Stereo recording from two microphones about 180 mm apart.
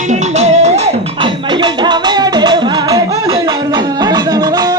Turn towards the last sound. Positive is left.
turn(degrees=-20)  # may be behind; listen again after turning